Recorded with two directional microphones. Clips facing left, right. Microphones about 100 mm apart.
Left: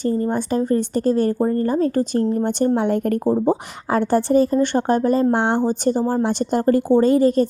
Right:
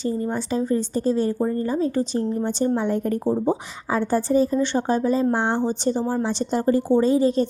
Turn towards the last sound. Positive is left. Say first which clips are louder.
# left 3 dB
turn(degrees=50)  # may be behind; listen again after turning